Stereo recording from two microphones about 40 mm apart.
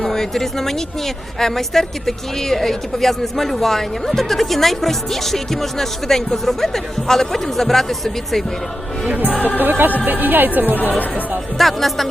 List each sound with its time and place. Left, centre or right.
0.0 s speech: centre
9.0 s speech: right
11.5 s speech: centre